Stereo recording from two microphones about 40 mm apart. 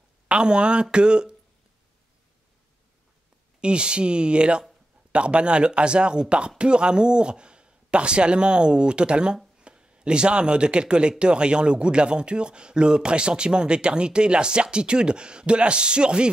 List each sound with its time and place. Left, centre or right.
0.3 s speech: right
3.6 s speech: right